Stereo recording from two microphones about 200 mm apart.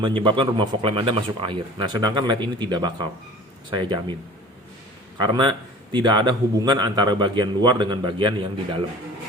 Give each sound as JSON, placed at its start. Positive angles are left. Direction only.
{"t": 0.0, "sound": "a man's voice", "side_deg": -25}
{"t": 5.2, "sound": "a man's voice", "side_deg": -25}